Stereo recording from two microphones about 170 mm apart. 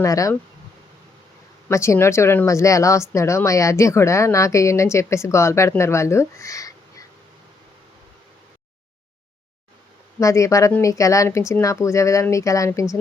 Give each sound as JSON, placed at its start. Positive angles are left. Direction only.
{"t": 0.0, "sound": "speech", "side_deg": 20}
{"t": 1.6, "sound": "speech", "side_deg": 15}
{"t": 10.2, "sound": "speech", "side_deg": 20}